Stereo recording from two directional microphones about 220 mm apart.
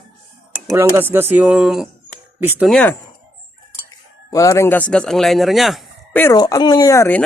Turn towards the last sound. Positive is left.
turn(degrees=10)  # may be behind; listen again after turning